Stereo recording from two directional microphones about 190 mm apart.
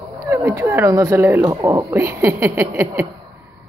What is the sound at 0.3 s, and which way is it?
Speech, 15° right (ahead or behind).